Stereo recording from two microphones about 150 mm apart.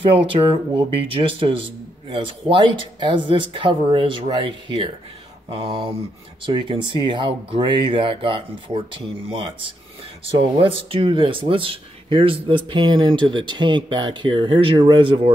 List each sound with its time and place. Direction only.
0.3 s speech: 35° right (ahead or behind)